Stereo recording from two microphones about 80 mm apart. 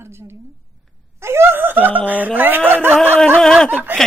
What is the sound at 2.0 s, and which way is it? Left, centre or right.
Speech, right.